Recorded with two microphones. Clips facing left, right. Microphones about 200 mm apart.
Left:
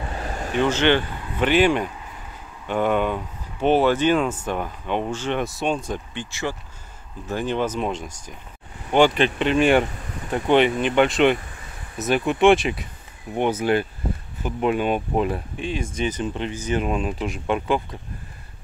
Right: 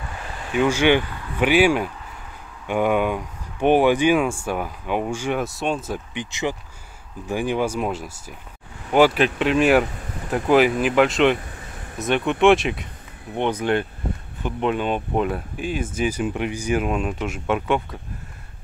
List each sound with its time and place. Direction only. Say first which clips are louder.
0.1 s vehicle: left 3 dB; 40° left (ahead or behind)
0.6 s speech: right 2 dB; 10° right (ahead or behind)
6.1 s speech: right 2 dB; 15° right (ahead or behind); by 17.8 s centre (ahead or behind)